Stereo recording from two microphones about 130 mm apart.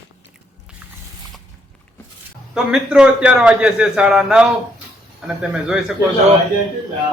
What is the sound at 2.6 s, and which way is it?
A man's voice, 5° right (ahead or behind).